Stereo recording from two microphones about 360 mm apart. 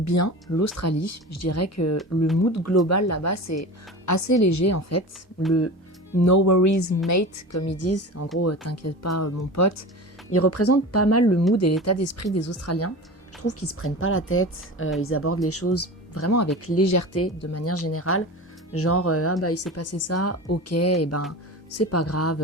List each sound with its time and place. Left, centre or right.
0.0 s a woman's voice: left
2.0 s speech: centre
2.4 s a woman's voice: left
6.1 s a woman's voice: left